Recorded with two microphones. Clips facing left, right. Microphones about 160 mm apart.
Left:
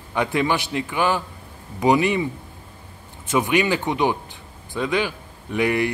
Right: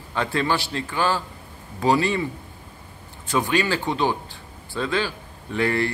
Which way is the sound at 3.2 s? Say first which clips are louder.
Left 2 dB; 20° left (ahead or behind).